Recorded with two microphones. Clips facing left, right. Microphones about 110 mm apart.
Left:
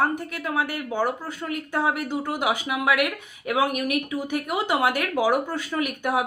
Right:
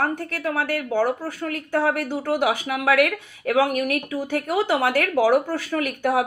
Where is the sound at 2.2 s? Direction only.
50° right (ahead or behind).